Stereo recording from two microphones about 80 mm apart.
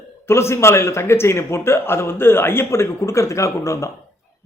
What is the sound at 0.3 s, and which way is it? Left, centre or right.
A man's voice, left.